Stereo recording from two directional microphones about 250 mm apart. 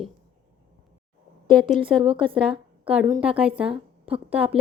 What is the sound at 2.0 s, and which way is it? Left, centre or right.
A woman's voice, right.